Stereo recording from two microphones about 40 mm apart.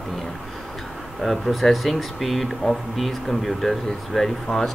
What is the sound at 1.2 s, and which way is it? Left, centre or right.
Speech, centre.